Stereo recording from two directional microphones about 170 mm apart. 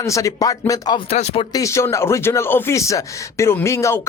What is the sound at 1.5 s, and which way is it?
Speech, 15° left (ahead or behind).